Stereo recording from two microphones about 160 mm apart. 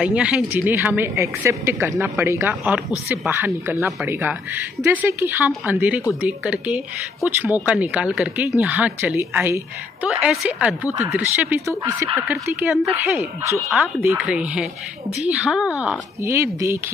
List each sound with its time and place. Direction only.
0.0 s a woman's voice: 5° right (ahead or behind)
16.2 s a woman's voice: 20° right (ahead or behind)